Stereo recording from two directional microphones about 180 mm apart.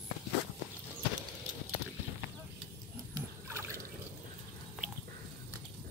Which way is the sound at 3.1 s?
15° right (ahead or behind).